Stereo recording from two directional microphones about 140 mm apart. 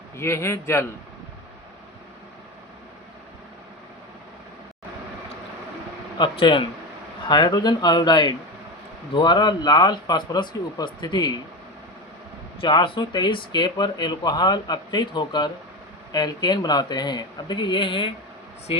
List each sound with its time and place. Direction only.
0.2 s a man's voice: 20° left (ahead or behind)
6.1 s speech: 35° left (ahead or behind)
12.5 s speech: 35° left (ahead or behind)